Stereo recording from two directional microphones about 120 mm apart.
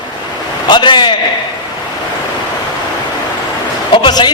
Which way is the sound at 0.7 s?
40° left (ahead or behind).